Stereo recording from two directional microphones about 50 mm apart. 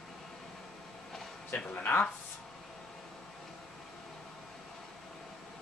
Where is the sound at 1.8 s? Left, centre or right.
Left.